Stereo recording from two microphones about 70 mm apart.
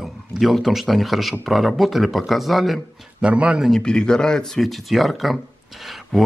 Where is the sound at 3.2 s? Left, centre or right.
Centre.